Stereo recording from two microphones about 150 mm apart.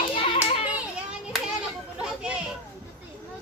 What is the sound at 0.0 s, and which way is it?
Hands, 35° left (ahead or behind).